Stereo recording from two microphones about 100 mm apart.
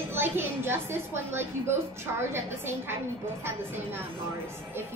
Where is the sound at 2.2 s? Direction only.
25° right (ahead or behind).